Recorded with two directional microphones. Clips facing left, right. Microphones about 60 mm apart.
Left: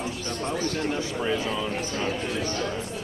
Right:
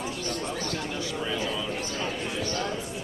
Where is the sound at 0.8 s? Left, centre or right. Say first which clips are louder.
Left 4 dB; left.